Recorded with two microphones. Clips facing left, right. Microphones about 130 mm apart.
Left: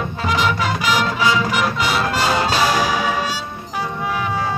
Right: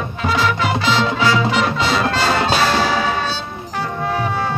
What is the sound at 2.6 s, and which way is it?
Brass instrument, 10° left (ahead or behind).